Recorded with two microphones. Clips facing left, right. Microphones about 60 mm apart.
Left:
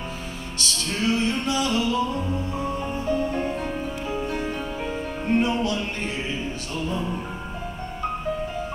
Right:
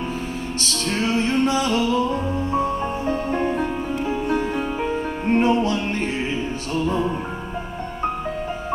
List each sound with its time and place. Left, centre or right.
0.6 s music: right
3.1 s music: right